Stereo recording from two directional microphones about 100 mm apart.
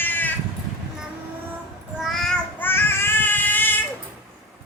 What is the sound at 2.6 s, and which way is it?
Child singing, 20° left (ahead or behind).